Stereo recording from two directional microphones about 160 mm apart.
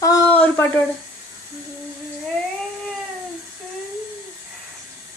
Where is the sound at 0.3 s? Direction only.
10° left (ahead or behind).